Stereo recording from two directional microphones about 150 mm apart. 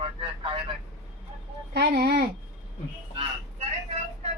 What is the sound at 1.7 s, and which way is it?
Speech, 90° right.